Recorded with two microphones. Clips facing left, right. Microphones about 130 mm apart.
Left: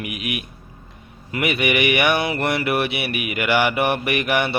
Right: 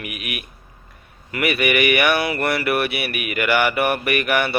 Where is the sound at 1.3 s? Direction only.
20° left (ahead or behind).